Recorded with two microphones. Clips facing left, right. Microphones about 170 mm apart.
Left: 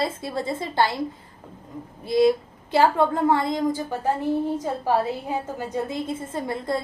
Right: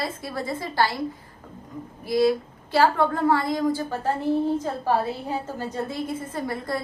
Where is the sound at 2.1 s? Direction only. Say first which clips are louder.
Left 2 dB; 20° left (ahead or behind).